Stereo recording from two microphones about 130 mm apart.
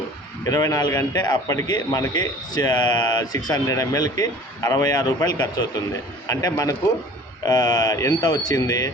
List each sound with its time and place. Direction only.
0.4 s a man's voice: 25° left (ahead or behind)